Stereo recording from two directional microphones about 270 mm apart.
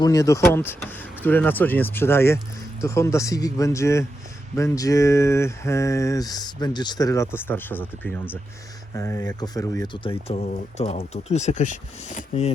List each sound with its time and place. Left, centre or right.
0.0 s speech: centre